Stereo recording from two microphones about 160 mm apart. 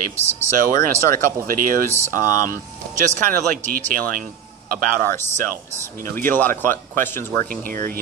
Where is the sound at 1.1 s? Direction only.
60° right (ahead or behind).